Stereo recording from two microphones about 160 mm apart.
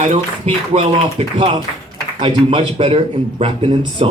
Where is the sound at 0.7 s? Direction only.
35° right (ahead or behind).